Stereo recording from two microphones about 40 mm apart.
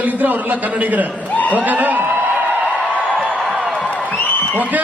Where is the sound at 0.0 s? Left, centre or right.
Right.